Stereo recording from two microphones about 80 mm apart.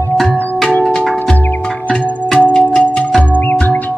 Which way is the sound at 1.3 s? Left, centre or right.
Centre.